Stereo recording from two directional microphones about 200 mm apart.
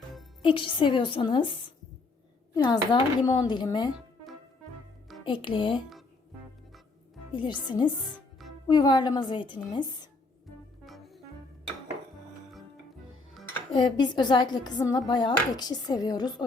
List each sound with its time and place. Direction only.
0.4 s speech: 25° left (ahead or behind)
5.2 s speech: 25° left (ahead or behind)
7.3 s speech: 25° left (ahead or behind)
10.8 s music: centre (ahead or behind)
13.7 s speech: 20° left (ahead or behind)